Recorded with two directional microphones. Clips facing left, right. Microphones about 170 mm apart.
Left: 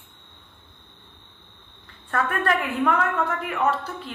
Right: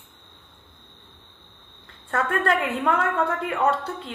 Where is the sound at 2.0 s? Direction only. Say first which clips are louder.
Right 1 dB; 25° right (ahead or behind).